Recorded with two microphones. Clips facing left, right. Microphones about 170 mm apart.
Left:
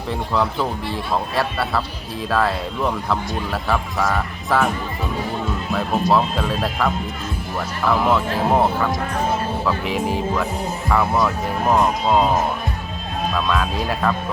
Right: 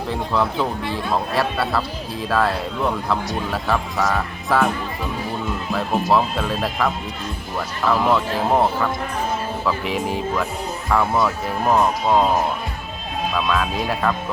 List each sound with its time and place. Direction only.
0.1 s speech: centre (ahead or behind)
5.7 s speech: centre (ahead or behind)
13.3 s speech: centre (ahead or behind)